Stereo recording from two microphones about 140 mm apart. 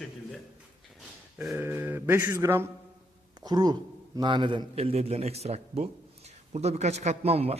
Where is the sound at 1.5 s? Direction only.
15° right (ahead or behind).